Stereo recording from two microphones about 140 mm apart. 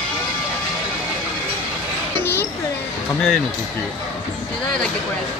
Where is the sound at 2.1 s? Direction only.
15° left (ahead or behind).